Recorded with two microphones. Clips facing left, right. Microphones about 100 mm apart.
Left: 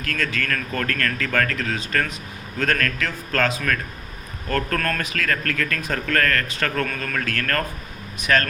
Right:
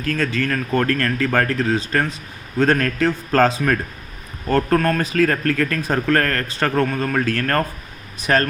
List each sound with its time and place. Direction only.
0.0 s a man's voice: 30° right (ahead or behind)